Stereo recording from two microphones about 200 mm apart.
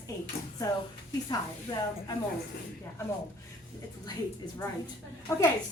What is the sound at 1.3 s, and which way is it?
Speech, 20° left (ahead or behind).